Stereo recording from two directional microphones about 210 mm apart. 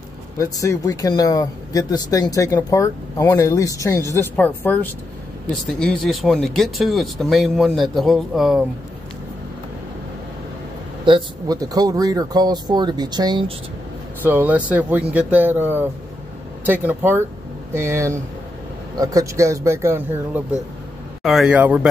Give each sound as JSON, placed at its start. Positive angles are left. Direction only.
{"t": 0.4, "sound": "speech", "side_deg": 15}
{"t": 11.1, "sound": "speech", "side_deg": -20}
{"t": 14.2, "sound": "speech", "side_deg": -10}
{"t": 21.2, "sound": "speech", "side_deg": 0}